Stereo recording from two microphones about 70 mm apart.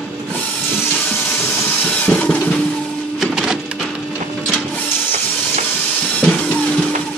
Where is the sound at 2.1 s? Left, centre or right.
Centre.